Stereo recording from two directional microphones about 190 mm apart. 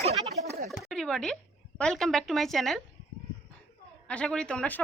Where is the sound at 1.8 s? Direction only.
5° left (ahead or behind).